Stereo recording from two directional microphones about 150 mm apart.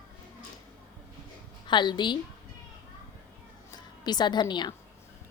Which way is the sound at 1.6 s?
30° left (ahead or behind).